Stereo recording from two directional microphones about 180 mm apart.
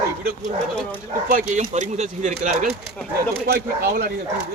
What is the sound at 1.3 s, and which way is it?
Speech, 50° right (ahead or behind).